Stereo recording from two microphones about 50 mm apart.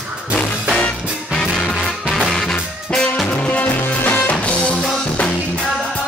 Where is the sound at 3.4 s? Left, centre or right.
Left.